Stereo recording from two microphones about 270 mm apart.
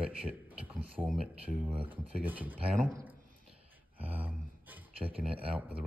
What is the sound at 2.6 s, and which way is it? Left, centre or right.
Speech, right.